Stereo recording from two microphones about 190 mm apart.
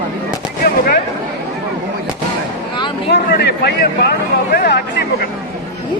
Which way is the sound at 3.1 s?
60° left (ahead or behind).